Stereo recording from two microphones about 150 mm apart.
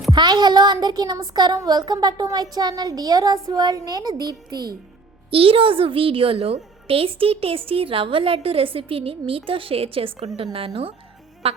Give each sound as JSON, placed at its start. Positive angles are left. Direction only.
{"t": 0.1, "sound": "a woman's voice", "side_deg": -30}
{"t": 11.4, "sound": "a woman's voice", "side_deg": -40}